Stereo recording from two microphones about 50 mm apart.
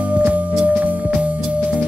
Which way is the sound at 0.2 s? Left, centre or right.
Right.